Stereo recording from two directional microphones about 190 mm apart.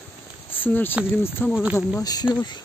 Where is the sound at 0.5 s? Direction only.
10° left (ahead or behind).